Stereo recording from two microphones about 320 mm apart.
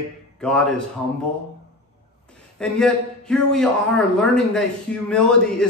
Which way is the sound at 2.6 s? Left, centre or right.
Centre.